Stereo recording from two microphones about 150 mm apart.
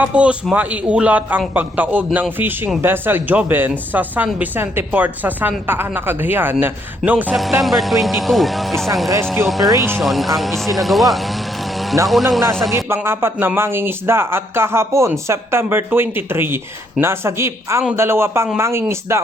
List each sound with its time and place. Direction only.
0.0 s speech: 10° right (ahead or behind)
7.6 s speech: centre (ahead or behind)
9.6 s speech: 20° right (ahead or behind)
10.0 s speech: centre (ahead or behind)
12.7 s speech: 15° right (ahead or behind)